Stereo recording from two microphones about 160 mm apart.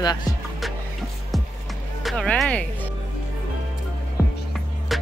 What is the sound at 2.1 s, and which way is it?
Speech, 5° left (ahead or behind).